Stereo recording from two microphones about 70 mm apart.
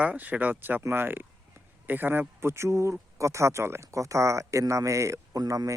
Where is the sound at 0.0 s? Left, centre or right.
Right.